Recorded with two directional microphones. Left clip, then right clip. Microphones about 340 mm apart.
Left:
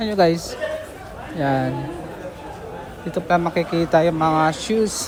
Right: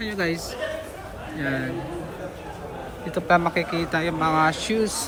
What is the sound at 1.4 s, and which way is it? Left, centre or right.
Speech, centre.